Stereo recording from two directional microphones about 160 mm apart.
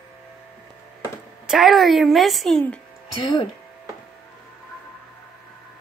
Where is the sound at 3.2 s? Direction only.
30° left (ahead or behind).